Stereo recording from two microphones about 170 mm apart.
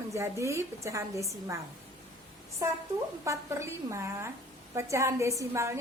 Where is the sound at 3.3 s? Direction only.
15° right (ahead or behind).